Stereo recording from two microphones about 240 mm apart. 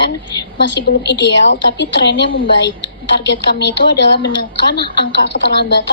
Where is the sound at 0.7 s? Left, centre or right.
Left.